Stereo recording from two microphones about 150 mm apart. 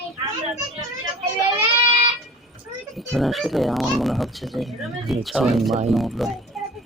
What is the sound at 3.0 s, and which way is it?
Speech, centre (ahead or behind).